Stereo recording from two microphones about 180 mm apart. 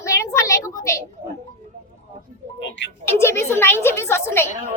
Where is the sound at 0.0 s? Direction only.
15° left (ahead or behind).